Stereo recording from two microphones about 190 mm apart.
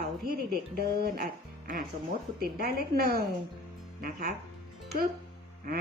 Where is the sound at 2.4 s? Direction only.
55° right (ahead or behind).